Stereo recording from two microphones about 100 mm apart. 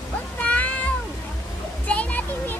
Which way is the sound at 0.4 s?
15° left (ahead or behind).